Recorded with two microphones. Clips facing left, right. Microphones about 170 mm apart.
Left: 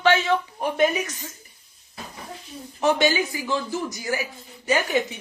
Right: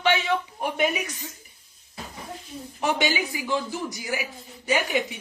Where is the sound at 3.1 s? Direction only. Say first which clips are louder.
Left 2 dB; 15° right (ahead or behind).